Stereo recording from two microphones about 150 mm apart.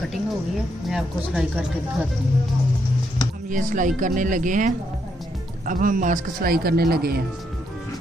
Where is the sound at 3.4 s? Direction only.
60° right (ahead or behind); by 7.2 s 90° right.